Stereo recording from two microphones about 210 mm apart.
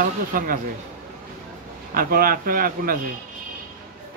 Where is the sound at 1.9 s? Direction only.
45° right (ahead or behind).